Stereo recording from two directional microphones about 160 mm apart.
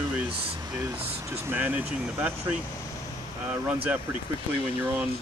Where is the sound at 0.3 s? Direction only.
35° right (ahead or behind).